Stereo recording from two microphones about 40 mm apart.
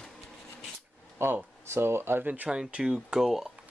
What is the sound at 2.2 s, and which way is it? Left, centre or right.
Speech, right.